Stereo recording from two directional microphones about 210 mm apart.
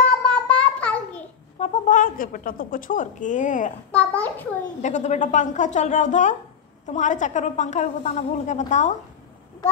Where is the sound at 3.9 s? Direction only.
10° left (ahead or behind).